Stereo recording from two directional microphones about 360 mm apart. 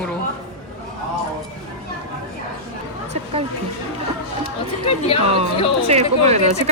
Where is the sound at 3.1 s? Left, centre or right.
Centre.